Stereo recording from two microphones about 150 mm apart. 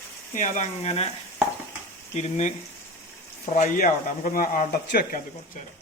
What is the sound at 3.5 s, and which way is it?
Speech, 65° left (ahead or behind).